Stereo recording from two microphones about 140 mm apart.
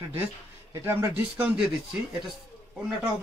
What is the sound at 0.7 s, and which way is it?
Speech, 15° right (ahead or behind).